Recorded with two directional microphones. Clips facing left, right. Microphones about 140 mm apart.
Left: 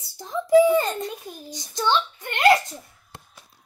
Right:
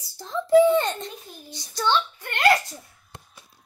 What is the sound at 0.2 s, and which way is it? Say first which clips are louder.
A child's voice: even; 10° left (ahead or behind).